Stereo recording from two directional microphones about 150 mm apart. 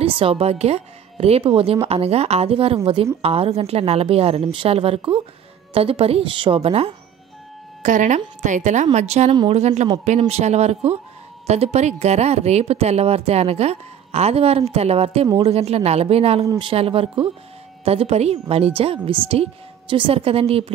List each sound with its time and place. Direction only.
0.0 s a woman's voice: 40° right (ahead or behind)
7.8 s a woman's voice: 60° right (ahead or behind); by 20.7 s 40° right (ahead or behind)